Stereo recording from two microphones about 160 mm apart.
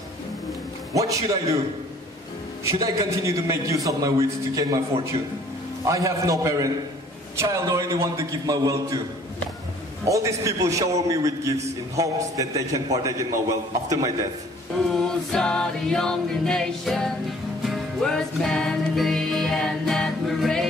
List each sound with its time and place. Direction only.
0.9 s a man's voice: 20° right (ahead or behind)
2.6 s a man's voice: 20° right (ahead or behind)
10.0 s a man's voice: 20° right (ahead or behind)
15.0 s music: 5° left (ahead or behind)